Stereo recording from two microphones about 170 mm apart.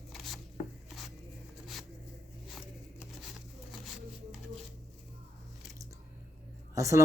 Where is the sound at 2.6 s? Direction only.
Centre (ahead or behind).